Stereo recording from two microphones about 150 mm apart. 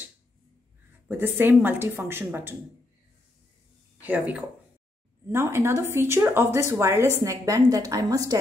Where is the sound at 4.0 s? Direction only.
10° right (ahead or behind).